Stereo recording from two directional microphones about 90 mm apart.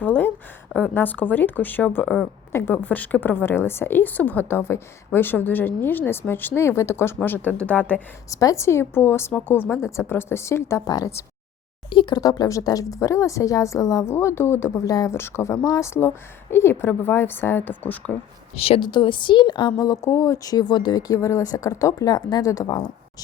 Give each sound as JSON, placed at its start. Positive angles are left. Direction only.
{"t": 0.0, "sound": "a sound", "side_deg": 20}
{"t": 0.8, "sound": "a woman's voice", "side_deg": 20}
{"t": 2.7, "sound": "a woman's voice", "side_deg": 15}
{"t": 8.3, "sound": "a woman's voice", "side_deg": 40}
{"t": 10.8, "sound": "speech", "side_deg": 45}
{"t": 11.9, "sound": "speech", "side_deg": 65}
{"t": 12.2, "sound": "a woman's voice", "side_deg": 45}
{"t": 14.1, "sound": "a woman's voice", "side_deg": 30}
{"t": 18.5, "sound": "a woman's voice", "side_deg": 90}
{"t": 18.9, "sound": "a woman's voice", "side_deg": 60}
{"t": 19.8, "sound": "speech", "side_deg": 40}
{"t": 21.1, "sound": "a woman's voice", "side_deg": 35}